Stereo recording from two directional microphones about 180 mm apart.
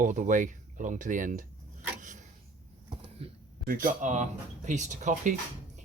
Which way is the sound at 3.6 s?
50° right (ahead or behind).